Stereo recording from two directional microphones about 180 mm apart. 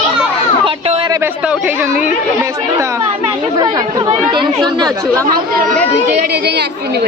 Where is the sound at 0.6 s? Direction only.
30° right (ahead or behind).